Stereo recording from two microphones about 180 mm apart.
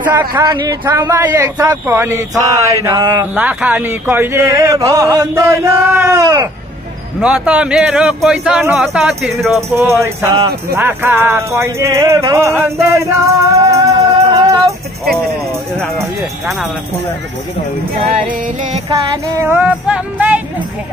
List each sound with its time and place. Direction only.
0.2 s music: 25° right (ahead or behind)
3.3 s music: 10° right (ahead or behind)
7.2 s speech: 5° right (ahead or behind)
9.6 s music: 15° right (ahead or behind)
15.8 s speech: centre (ahead or behind)
17.9 s music: 35° right (ahead or behind)
18.9 s music: 20° right (ahead or behind)